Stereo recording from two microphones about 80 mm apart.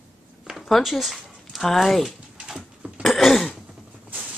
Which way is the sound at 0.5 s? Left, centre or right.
Centre.